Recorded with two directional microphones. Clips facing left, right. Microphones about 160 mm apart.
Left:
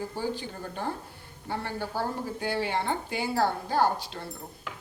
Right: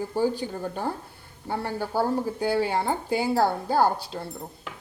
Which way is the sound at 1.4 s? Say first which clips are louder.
Right 4 dB; 45° right (ahead or behind).